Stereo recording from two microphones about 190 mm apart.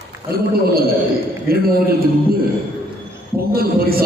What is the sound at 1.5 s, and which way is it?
Speech, 50° right (ahead or behind).